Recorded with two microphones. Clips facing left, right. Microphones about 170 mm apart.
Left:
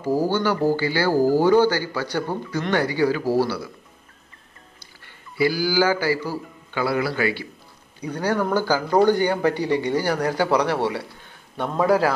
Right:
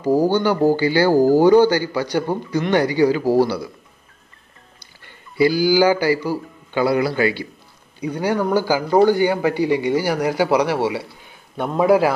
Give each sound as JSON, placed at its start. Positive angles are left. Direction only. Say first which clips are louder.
{"t": 0.0, "sound": "a man's voice", "louder": "right 4 dB", "side_deg": -20}
{"t": 5.4, "sound": "a man's voice", "louder": "right 5 dB", "side_deg": -20}